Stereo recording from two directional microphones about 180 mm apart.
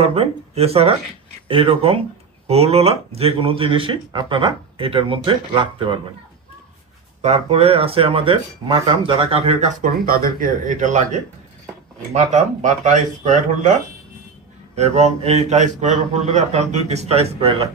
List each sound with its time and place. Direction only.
0.0 s speech: 35° right (ahead or behind)
7.2 s speech: 35° right (ahead or behind)
14.8 s speech: 40° right (ahead or behind)